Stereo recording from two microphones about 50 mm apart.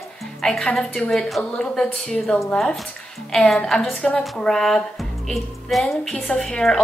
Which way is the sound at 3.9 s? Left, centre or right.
Left.